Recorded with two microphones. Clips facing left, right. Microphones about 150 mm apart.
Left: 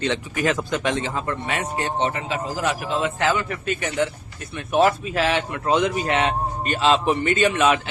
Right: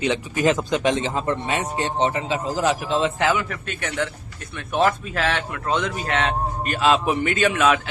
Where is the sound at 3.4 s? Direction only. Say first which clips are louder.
Left 4 dB; centre (ahead or behind).